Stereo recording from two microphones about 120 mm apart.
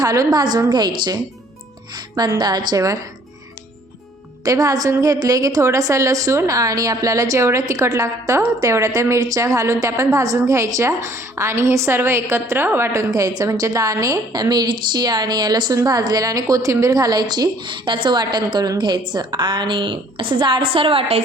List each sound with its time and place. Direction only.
0.0 s a woman's voice: 30° right (ahead or behind)
4.4 s a woman's voice: 30° right (ahead or behind); by 21.2 s 55° right (ahead or behind)